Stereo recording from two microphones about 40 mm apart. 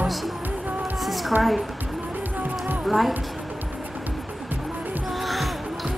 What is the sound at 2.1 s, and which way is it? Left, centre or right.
Music, right.